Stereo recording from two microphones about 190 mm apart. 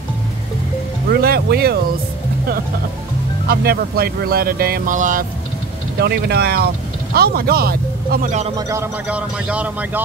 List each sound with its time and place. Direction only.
1.2 s speech: 55° right (ahead or behind)
3.4 s speech: 55° right (ahead or behind)
5.9 s speech: 55° right (ahead or behind); by 8.5 s 35° right (ahead or behind)
8.5 s a man's voice: 15° right (ahead or behind)